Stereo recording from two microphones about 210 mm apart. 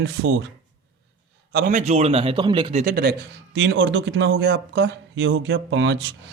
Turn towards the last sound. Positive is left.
turn(degrees=-60)  # may be behind; listen again after turning